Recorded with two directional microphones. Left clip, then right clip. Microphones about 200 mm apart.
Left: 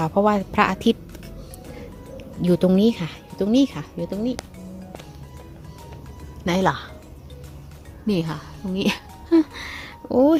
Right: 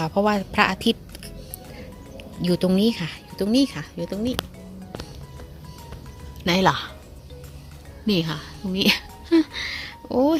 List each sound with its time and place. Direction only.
0.0 s a woman's voice: 5° left (ahead or behind)
6.4 s speech: 10° right (ahead or behind)
8.0 s a sound: 5° right (ahead or behind)